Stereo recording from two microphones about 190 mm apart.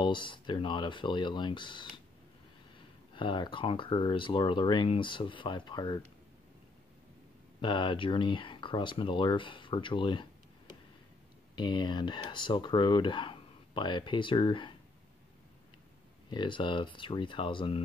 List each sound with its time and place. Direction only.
0.0 s speech: 25° left (ahead or behind)
3.2 s speech: 25° left (ahead or behind)
7.6 s speech: 25° left (ahead or behind)
11.5 s speech: 25° left (ahead or behind)
16.3 s speech: 25° left (ahead or behind)